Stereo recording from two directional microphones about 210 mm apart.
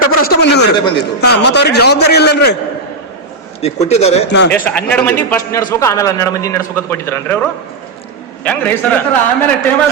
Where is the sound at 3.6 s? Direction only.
30° left (ahead or behind).